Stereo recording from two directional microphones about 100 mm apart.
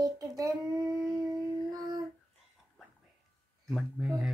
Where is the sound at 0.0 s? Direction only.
40° right (ahead or behind).